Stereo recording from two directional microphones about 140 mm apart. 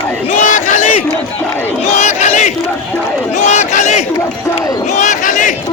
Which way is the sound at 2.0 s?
55° left (ahead or behind).